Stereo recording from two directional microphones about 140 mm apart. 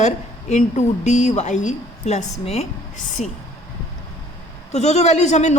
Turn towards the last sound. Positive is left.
turn(degrees=55)  # may be behind; listen again after turning